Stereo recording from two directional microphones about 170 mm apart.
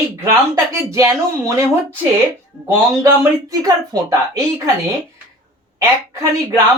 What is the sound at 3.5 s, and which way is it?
Speech, 20° right (ahead or behind).